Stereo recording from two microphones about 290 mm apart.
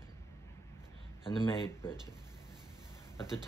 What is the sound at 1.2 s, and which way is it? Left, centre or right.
Speech, centre.